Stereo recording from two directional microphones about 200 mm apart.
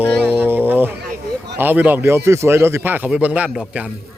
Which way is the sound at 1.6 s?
10° right (ahead or behind).